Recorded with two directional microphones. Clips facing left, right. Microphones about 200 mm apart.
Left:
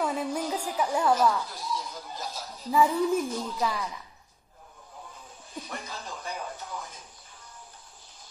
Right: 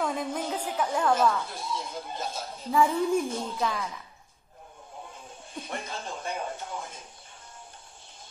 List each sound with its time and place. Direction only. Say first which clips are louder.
0.0 s music: left 1 dB; 5° left (ahead or behind)
0.4 s speech: left 1 dB; 25° right (ahead or behind)
0.7 s speech: left 1 dB; 10° left (ahead or behind)
1.4 s a sound: even; 25° right (ahead or behind)
2.7 s a woman's voice: even; 5° left (ahead or behind)
3.3 s speech: even; 25° right (ahead or behind)
5.1 s a sound: left 2 dB; 25° right (ahead or behind)